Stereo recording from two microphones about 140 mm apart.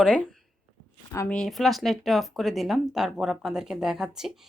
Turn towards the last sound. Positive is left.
turn(degrees=-5)  # may be behind; listen again after turning